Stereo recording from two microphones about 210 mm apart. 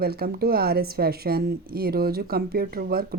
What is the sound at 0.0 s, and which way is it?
A woman's voice, 45° right (ahead or behind).